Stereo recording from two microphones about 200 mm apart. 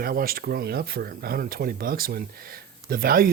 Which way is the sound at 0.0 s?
45° right (ahead or behind).